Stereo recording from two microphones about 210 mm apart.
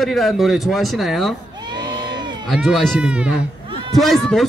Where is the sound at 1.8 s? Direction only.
20° right (ahead or behind).